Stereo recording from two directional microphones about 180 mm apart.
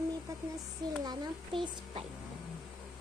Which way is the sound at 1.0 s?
25° right (ahead or behind).